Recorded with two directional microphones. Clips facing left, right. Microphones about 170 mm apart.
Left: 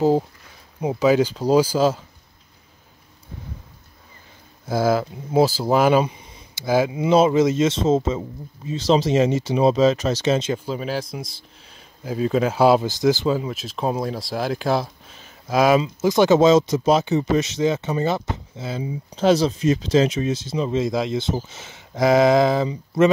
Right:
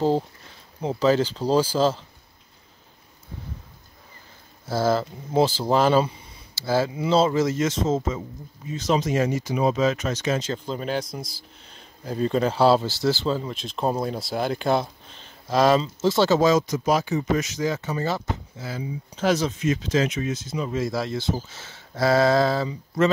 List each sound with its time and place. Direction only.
0.7 s speech: 10° left (ahead or behind)
4.6 s speech: 10° left (ahead or behind)
10.5 s speech: 5° left (ahead or behind)